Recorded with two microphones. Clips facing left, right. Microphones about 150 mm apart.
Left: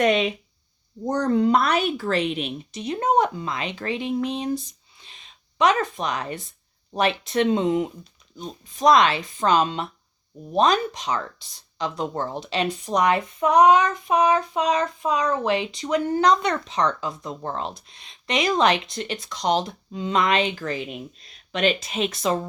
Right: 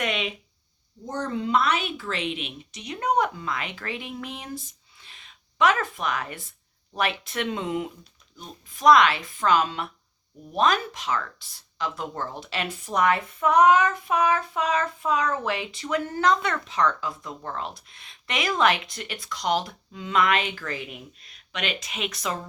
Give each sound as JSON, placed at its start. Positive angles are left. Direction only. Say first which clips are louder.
{"t": 0.0, "sound": "a woman's voice", "louder": "left 9 dB", "side_deg": 40}
{"t": 4.9, "sound": "a sound", "louder": "left 2 dB", "side_deg": 20}
{"t": 6.9, "sound": "child singing", "louder": "left 6 dB", "side_deg": 25}